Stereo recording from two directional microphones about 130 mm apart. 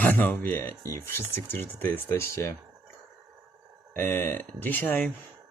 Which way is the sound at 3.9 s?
15° left (ahead or behind).